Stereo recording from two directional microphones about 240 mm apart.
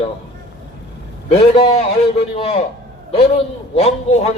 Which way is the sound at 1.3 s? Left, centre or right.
Left.